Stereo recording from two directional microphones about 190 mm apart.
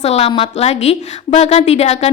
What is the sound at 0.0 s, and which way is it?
A woman's voice, 35° left (ahead or behind).